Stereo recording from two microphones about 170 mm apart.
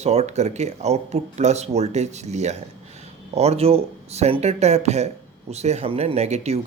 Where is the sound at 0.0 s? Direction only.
40° right (ahead or behind).